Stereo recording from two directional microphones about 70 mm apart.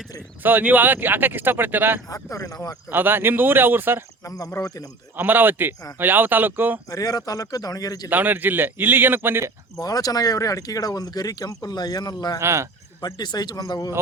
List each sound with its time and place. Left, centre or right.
0.4 s speech: right
2.0 s speech: left
2.9 s speech: right
4.2 s speech: left
5.1 s speech: right
6.9 s speech: left
8.1 s speech: right
9.7 s speech: left
12.4 s speech: right
13.1 s speech: left